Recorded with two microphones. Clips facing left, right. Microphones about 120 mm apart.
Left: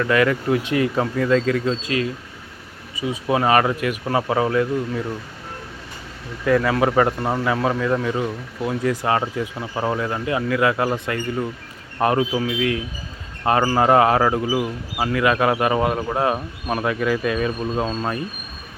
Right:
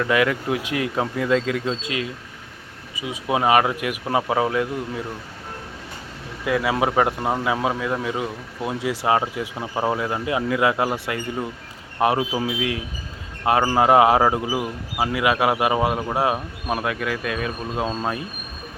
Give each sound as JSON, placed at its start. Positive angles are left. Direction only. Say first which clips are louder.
{"t": 0.0, "sound": "speech", "louder": "left 2 dB", "side_deg": -10}
{"t": 6.4, "sound": "speech", "louder": "left 3 dB", "side_deg": -10}
{"t": 14.5, "sound": "speech", "louder": "left 3 dB", "side_deg": 0}
{"t": 15.0, "sound": "speech", "louder": "left 1 dB", "side_deg": -10}